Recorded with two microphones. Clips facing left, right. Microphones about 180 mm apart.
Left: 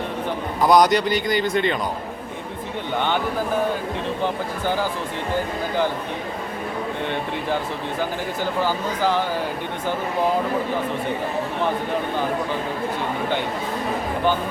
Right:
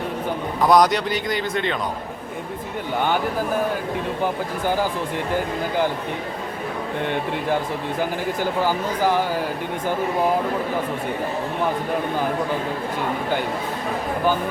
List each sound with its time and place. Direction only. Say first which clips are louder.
0.6 s a man's voice: left 1 dB; centre (ahead or behind)
8.6 s speech: right 1 dB; 15° right (ahead or behind)